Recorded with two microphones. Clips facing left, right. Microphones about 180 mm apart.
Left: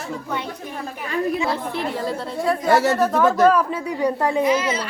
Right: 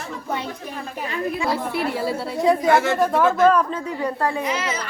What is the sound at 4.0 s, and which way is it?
Speech, 15° left (ahead or behind).